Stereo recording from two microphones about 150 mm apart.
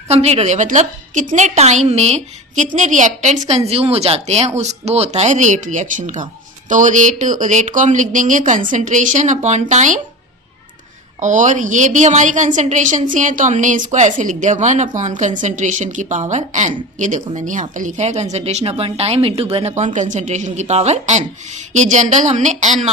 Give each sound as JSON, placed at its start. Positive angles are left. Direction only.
{"t": 0.1, "sound": "a woman's voice", "side_deg": -45}
{"t": 11.2, "sound": "a woman's voice", "side_deg": -55}